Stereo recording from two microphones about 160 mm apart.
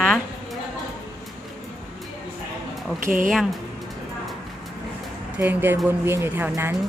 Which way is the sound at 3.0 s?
55° right (ahead or behind).